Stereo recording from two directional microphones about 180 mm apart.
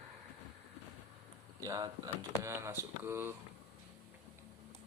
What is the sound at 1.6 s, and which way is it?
Speech, 20° right (ahead or behind).